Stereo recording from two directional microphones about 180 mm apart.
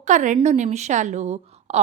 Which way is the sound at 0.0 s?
40° right (ahead or behind).